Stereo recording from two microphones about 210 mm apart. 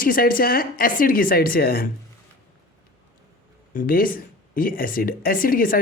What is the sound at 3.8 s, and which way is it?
Speech, 40° left (ahead or behind).